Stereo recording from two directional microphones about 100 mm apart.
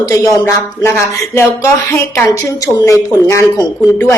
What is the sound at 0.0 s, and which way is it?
A woman's voice, 35° left (ahead or behind).